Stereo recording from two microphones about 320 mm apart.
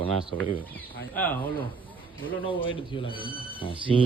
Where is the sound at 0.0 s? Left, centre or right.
Centre.